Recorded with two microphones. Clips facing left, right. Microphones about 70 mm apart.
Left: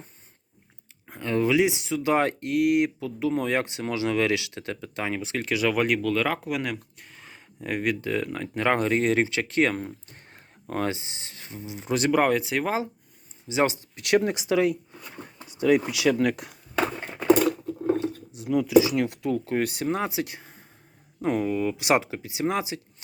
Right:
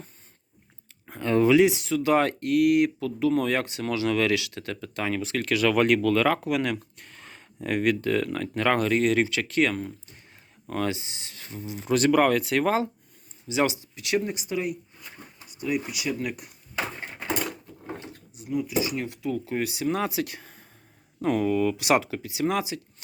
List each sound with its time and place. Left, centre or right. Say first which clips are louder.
1.0 s a sound: right 3 dB; centre
1.5 s speech: right 3 dB; centre; by 10.8 s left
10.8 s speech: even; left; by 12.9 s centre
13.5 s speech: left 1 dB; left
13.9 s speech: left 4 dB; left
18.3 s speech: left 8 dB; left
19.9 s speech: even; left